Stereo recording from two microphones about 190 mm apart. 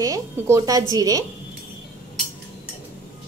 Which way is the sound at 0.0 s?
15° right (ahead or behind).